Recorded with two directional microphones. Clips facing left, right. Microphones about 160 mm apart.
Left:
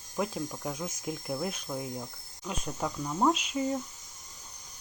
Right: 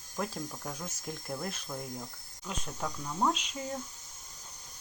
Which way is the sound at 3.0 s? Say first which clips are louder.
Left 4 dB; 15° left (ahead or behind).